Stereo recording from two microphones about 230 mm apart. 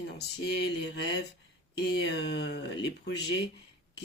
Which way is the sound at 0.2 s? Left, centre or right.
Left.